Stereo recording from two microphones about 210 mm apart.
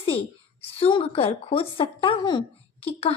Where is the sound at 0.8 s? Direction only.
25° left (ahead or behind).